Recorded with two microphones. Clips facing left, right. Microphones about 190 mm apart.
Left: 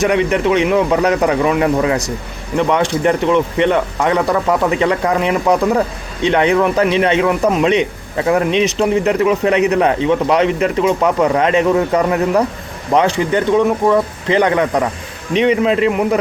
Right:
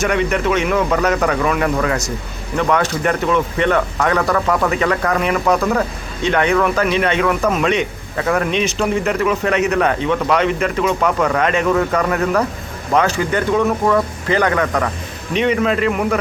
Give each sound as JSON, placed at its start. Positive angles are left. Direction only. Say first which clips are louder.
{"t": 0.1, "sound": "a man's voice", "louder": "left 3 dB", "side_deg": 20}
{"t": 6.2, "sound": "a man's voice", "louder": "left 3 dB", "side_deg": 25}